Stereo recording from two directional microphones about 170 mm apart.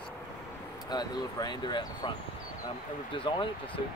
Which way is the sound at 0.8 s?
25° left (ahead or behind).